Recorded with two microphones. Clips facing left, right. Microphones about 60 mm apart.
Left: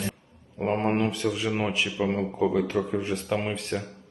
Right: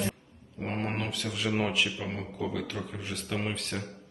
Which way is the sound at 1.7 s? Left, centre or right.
Left.